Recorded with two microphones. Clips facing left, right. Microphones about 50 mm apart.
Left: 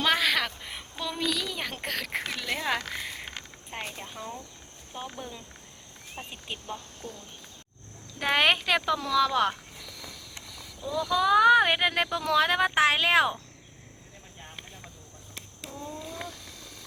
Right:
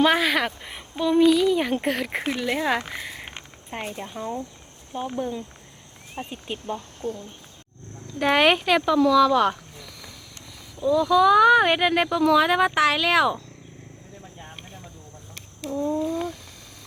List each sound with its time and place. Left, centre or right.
0.0 s speech: centre
6.7 s speech: right
8.2 s speech: centre
10.8 s speech: right
11.1 s speech: centre
12.7 s speech: left
15.7 s speech: right